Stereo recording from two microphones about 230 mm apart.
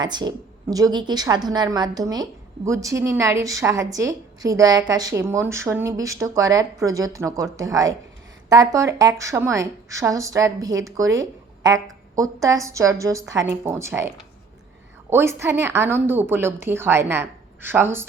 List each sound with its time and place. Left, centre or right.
0.0 s a woman's voice: centre
15.1 s a woman's voice: centre